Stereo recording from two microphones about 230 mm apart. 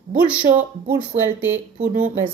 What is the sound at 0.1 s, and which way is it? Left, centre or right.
A woman's voice, centre.